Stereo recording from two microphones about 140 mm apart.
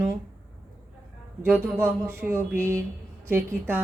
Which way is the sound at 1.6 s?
15° right (ahead or behind).